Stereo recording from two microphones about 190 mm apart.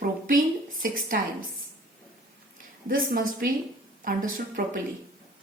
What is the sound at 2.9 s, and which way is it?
A woman's voice, 50° right (ahead or behind).